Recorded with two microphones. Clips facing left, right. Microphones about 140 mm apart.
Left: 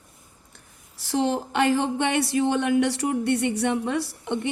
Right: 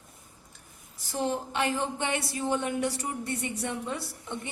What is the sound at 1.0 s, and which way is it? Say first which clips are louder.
Speech: left 6 dB; 90° left.